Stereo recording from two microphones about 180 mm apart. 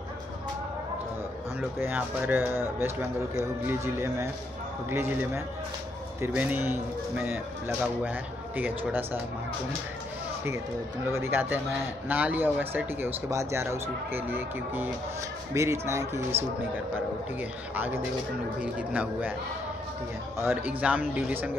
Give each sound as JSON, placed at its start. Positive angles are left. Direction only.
{"t": 1.6, "sound": "speech", "side_deg": -10}
{"t": 11.1, "sound": "speech", "side_deg": -15}
{"t": 17.4, "sound": "speech", "side_deg": -10}
{"t": 20.3, "sound": "speech", "side_deg": -10}